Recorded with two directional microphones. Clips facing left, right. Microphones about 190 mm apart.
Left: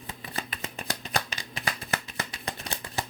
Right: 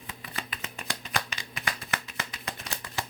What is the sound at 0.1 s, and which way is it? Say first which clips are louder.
Shuffling cards: left 3 dB; 35° left (ahead or behind).